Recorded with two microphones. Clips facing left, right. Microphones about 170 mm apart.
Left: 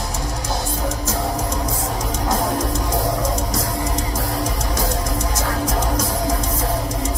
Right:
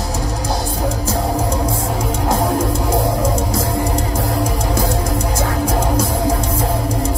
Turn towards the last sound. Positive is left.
turn(degrees=-30)  # may be behind; listen again after turning